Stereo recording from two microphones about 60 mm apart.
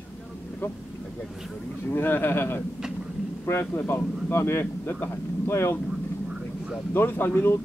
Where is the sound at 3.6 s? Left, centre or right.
Left.